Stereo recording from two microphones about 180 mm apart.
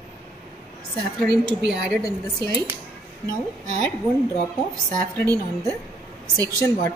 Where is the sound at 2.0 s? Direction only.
20° left (ahead or behind).